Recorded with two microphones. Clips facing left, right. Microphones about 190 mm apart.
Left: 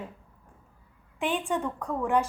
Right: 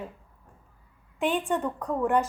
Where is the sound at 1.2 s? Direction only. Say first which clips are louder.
Right 2 dB; centre (ahead or behind).